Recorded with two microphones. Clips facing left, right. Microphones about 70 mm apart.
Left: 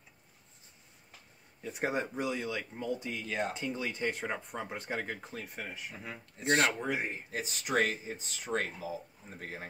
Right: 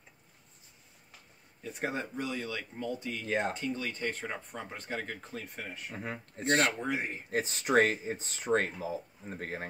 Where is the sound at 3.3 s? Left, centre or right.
Right.